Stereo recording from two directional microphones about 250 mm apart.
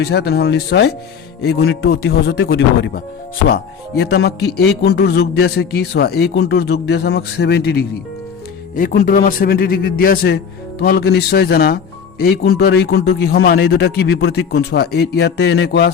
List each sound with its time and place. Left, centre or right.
0.0 s a man's voice: left
4.0 s a man's voice: left